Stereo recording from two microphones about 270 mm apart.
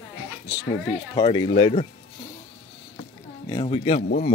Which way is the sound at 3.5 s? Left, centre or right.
Centre.